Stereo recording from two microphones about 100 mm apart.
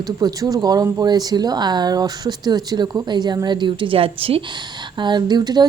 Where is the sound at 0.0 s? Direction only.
40° right (ahead or behind).